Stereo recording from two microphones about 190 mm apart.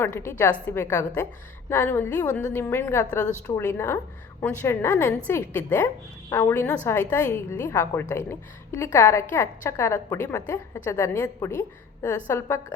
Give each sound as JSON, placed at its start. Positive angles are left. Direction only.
{"t": 0.0, "sound": "a woman's voice", "side_deg": 15}